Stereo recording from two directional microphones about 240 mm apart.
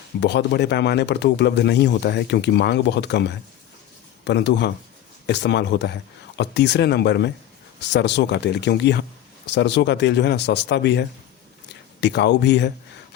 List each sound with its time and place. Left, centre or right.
0.2 s speech: left